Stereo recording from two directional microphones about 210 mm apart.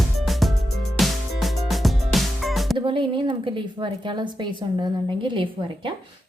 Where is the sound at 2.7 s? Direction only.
25° right (ahead or behind).